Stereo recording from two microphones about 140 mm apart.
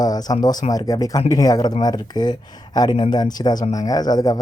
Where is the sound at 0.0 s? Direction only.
25° left (ahead or behind).